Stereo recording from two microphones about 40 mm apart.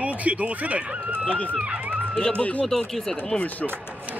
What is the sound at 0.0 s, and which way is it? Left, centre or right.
Speech, right.